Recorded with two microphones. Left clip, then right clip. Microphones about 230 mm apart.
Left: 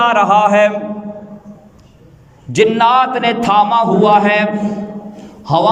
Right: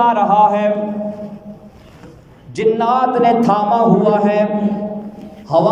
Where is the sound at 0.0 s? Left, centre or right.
Left.